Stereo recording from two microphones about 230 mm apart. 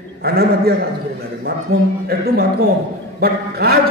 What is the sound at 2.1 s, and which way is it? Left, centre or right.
A man's voice, right.